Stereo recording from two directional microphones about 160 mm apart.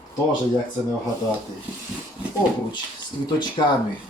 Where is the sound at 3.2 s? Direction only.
25° left (ahead or behind).